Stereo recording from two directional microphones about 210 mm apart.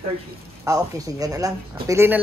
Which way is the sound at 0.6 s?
15° right (ahead or behind).